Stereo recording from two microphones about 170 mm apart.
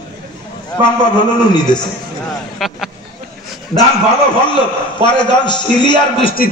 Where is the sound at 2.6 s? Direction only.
Centre (ahead or behind).